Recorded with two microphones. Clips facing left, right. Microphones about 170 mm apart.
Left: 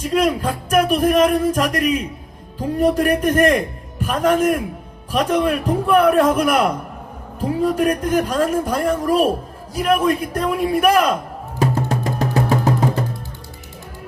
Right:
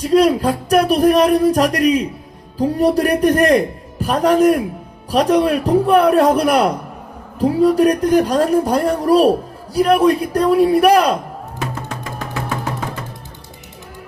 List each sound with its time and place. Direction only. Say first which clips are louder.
0.0 s speech: right 5 dB; 35° right (ahead or behind)
11.6 s music: left 7 dB; 35° left (ahead or behind)